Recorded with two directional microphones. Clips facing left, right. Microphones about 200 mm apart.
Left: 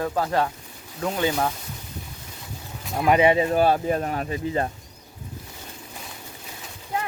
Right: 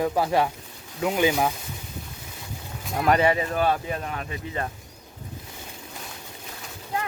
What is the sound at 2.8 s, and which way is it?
Speech, 5° left (ahead or behind).